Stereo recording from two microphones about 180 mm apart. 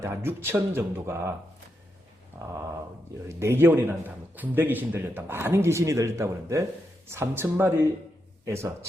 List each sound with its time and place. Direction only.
0.0 s speech: 15° right (ahead or behind)
3.2 s speech: 15° right (ahead or behind)